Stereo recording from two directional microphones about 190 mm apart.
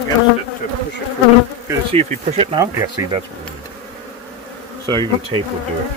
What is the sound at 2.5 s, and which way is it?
Speech, 15° right (ahead or behind).